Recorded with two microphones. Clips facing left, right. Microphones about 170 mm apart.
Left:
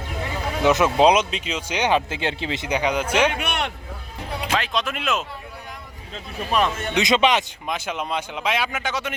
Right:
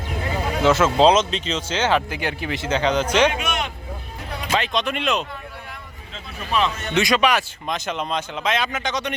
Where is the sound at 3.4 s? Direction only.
60° left (ahead or behind).